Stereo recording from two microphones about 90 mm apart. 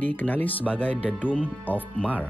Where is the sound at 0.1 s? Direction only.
20° left (ahead or behind).